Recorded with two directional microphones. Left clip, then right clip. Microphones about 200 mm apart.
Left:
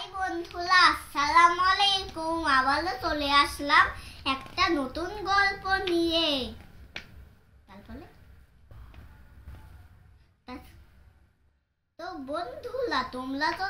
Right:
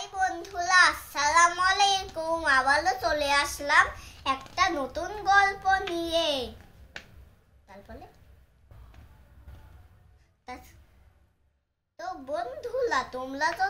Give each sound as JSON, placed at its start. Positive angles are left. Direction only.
{"t": 0.2, "sound": "child singing", "side_deg": -25}
{"t": 4.7, "sound": "a child's voice", "side_deg": -25}
{"t": 12.0, "sound": "a child's voice", "side_deg": -20}